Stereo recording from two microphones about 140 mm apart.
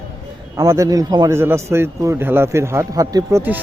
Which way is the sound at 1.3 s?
20° right (ahead or behind).